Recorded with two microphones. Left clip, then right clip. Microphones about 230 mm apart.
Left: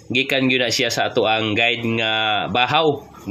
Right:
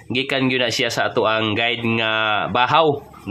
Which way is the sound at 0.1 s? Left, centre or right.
Centre.